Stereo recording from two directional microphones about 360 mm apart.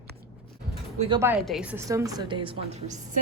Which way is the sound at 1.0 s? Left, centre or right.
Centre.